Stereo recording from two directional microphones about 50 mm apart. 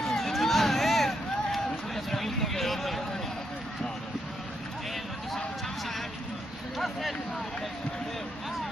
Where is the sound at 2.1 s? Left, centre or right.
Centre.